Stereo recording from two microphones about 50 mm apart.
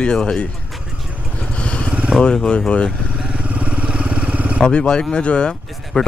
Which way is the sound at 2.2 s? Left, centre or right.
Centre.